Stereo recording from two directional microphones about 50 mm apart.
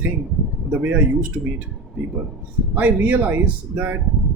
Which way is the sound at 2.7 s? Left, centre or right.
Right.